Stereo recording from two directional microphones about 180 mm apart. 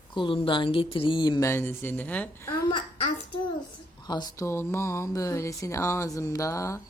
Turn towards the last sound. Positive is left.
turn(degrees=15)  # may be behind; listen again after turning